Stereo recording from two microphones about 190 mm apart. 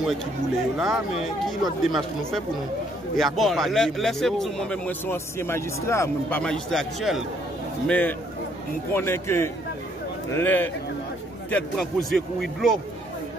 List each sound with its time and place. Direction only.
0.7 s speech: 5° right (ahead or behind); by 6.4 s 15° left (ahead or behind)
6.4 s a man's voice: centre (ahead or behind)